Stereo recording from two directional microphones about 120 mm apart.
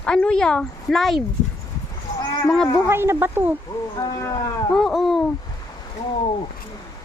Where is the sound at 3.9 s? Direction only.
35° left (ahead or behind).